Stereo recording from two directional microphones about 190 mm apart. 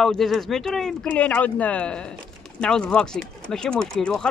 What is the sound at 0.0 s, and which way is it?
Speech, centre (ahead or behind).